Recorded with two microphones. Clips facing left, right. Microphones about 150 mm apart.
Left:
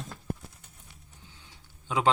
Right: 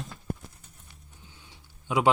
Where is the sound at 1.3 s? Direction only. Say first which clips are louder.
Right 1 dB; 10° right (ahead or behind).